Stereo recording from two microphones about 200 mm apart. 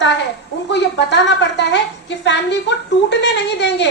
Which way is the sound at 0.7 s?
60° left (ahead or behind).